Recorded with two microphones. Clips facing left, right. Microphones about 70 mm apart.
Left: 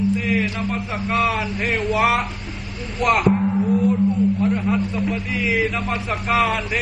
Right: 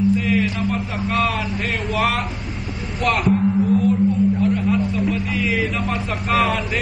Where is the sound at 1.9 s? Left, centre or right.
Centre.